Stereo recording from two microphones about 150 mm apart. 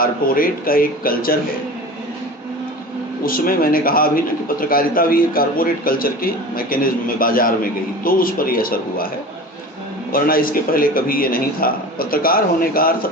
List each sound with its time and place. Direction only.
0.0 s a man's voice: 75° left (ahead or behind)
3.2 s a man's voice: 75° left (ahead or behind)
10.1 s a man's voice: 75° left (ahead or behind)